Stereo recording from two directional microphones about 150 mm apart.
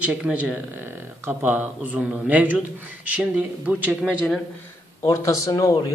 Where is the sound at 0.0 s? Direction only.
10° right (ahead or behind).